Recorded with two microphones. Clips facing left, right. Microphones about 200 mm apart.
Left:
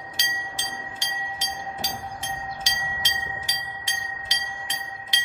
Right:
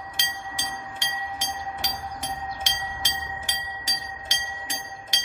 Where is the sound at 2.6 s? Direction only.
50° right (ahead or behind).